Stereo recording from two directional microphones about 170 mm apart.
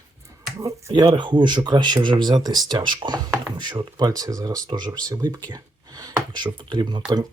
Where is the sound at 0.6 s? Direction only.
25° right (ahead or behind).